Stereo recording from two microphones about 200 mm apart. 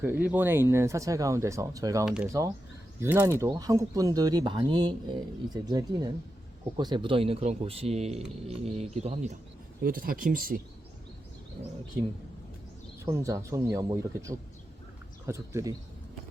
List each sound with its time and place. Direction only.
0.0 s speech: 10° right (ahead or behind); by 9.3 s 35° right (ahead or behind)
9.8 s speech: 45° right (ahead or behind)
13.1 s speech: 15° right (ahead or behind)